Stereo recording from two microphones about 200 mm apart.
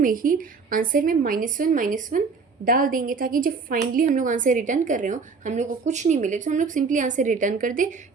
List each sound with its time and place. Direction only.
0.0 s a woman's voice: 45° right (ahead or behind)